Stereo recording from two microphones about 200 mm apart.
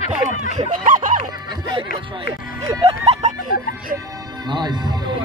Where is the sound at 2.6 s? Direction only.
20° right (ahead or behind).